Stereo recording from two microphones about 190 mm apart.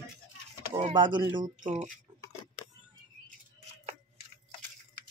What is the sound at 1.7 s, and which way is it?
Speech, 40° right (ahead or behind).